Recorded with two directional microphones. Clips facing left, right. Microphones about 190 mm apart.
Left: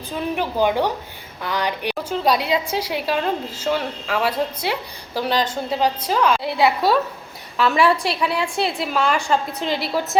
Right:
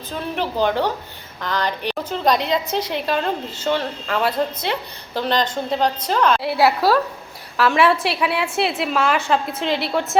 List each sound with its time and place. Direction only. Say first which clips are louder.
0.2 s a woman's voice: left 1 dB; 10° left (ahead or behind)
6.4 s a woman's voice: right 1 dB; 5° right (ahead or behind)